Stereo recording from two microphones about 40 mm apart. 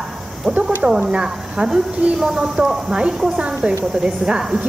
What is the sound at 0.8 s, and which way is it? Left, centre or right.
A woman's voice, centre.